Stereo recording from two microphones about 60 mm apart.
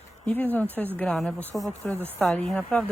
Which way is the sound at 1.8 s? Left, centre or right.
Left.